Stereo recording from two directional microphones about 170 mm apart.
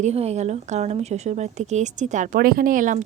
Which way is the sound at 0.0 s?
40° right (ahead or behind).